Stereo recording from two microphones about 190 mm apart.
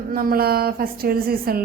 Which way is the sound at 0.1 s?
50° right (ahead or behind).